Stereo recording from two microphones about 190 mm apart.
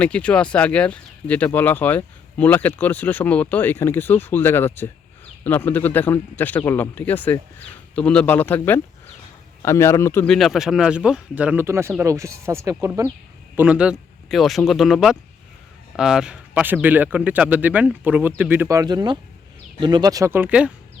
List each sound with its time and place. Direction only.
0.0 s speech: 5° left (ahead or behind)
10.2 s speech: centre (ahead or behind)